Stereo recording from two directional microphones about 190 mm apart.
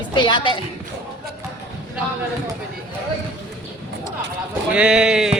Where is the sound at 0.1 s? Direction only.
25° left (ahead or behind).